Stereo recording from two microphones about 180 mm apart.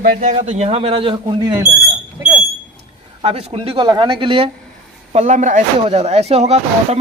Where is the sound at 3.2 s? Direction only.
35° right (ahead or behind).